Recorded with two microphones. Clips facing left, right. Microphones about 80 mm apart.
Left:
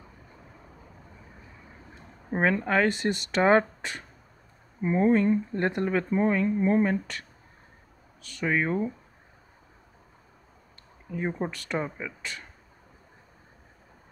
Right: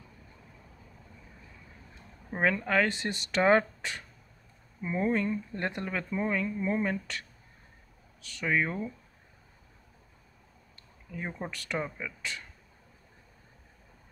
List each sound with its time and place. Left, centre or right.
1.3 s a sound: left
4.8 s speech: left
8.4 s speech: left
11.1 s speech: left